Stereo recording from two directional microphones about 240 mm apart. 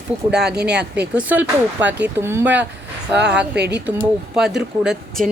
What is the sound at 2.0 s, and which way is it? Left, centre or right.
Speech, centre.